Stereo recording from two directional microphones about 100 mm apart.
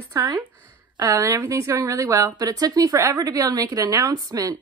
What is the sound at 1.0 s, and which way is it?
A woman's voice, 35° right (ahead or behind).